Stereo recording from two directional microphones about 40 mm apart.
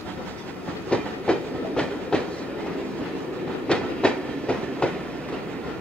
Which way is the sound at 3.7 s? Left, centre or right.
Left.